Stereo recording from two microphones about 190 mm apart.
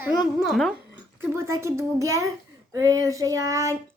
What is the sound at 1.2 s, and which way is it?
Cutlery, 15° right (ahead or behind).